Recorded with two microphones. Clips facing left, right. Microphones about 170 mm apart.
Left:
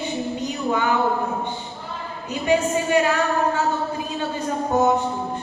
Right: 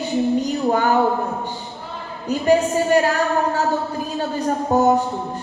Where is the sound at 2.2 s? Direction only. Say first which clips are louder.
Right 4 dB; 40° right (ahead or behind).